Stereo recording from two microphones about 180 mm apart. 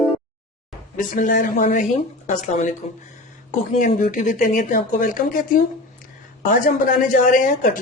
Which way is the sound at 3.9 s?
45° left (ahead or behind).